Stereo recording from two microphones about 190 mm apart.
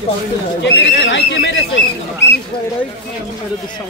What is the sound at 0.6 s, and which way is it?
Speech, 70° left (ahead or behind).